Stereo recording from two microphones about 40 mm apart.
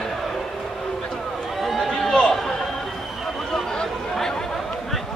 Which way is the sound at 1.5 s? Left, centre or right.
Centre.